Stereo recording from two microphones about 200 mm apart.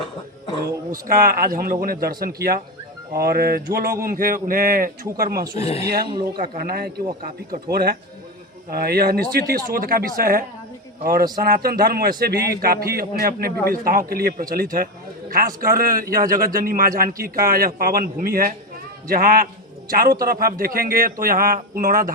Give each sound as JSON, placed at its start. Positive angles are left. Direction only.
{"t": 0.9, "sound": "a man's voice", "side_deg": -45}
{"t": 5.5, "sound": "speech", "side_deg": 30}
{"t": 6.6, "sound": "a man's voice", "side_deg": -50}